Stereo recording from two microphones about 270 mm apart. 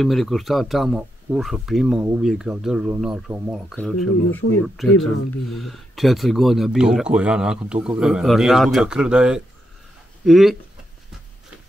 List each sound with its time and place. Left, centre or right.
0.0 s speech: centre